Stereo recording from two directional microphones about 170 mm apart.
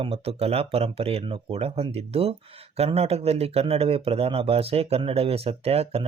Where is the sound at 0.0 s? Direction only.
35° right (ahead or behind).